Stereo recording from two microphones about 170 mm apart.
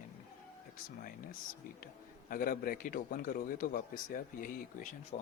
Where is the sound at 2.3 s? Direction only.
55° left (ahead or behind).